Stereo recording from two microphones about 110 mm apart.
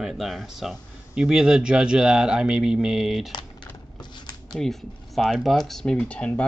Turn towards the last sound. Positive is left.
turn(degrees=10)  # may be behind; listen again after turning